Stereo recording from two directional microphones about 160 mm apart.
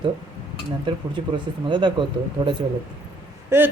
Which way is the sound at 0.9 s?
30° right (ahead or behind).